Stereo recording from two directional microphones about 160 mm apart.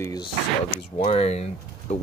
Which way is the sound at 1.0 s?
40° left (ahead or behind).